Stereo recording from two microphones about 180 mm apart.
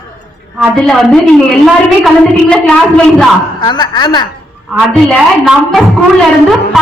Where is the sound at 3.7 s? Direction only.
25° left (ahead or behind).